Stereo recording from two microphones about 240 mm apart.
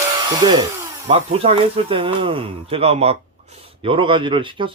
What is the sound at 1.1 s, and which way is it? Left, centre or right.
Speech, right.